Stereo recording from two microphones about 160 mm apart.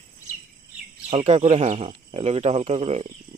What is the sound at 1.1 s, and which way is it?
Speech, 35° right (ahead or behind).